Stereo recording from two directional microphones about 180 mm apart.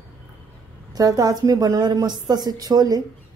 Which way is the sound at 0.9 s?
20° right (ahead or behind).